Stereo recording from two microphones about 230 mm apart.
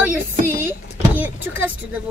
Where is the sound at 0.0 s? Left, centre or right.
Centre.